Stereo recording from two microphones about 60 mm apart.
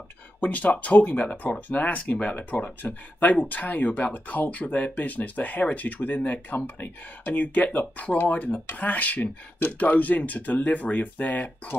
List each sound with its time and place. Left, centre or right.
0.4 s speech: left